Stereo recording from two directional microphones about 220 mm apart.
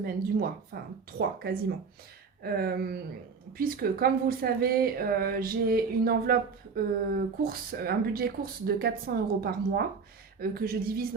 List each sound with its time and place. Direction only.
0.0 s speech: 40° right (ahead or behind)